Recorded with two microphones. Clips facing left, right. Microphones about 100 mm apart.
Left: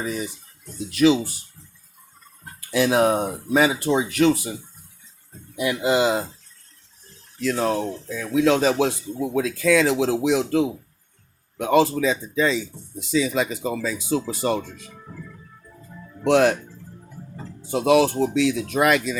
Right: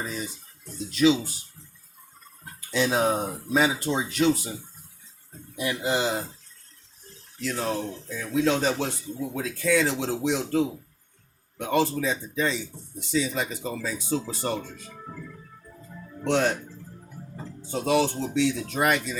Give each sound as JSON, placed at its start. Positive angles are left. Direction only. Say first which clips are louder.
{"t": 0.0, "sound": "speech", "louder": "left 5 dB", "side_deg": 65}
{"t": 2.6, "sound": "speech", "louder": "left 5 dB", "side_deg": 70}
{"t": 5.8, "sound": "speech", "louder": "left 7 dB", "side_deg": 90}
{"t": 7.4, "sound": "speech", "louder": "left 6 dB", "side_deg": 85}
{"t": 16.2, "sound": "speech", "louder": "left 7 dB", "side_deg": 90}
{"t": 17.7, "sound": "speech", "louder": "left 6 dB", "side_deg": 85}